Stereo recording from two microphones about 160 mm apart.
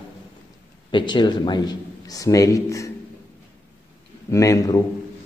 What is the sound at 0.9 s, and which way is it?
A man's voice, 30° left (ahead or behind).